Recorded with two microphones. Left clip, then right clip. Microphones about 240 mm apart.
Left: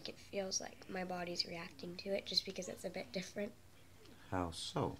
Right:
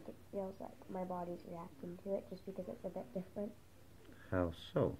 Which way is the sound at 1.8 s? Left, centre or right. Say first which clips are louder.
Even; centre.